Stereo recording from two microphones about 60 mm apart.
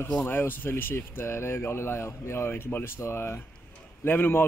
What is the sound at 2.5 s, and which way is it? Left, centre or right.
Speech, left.